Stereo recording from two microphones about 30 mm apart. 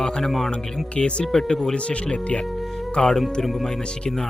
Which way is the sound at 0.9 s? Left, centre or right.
Left.